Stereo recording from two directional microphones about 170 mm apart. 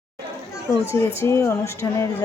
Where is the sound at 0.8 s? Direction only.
15° left (ahead or behind).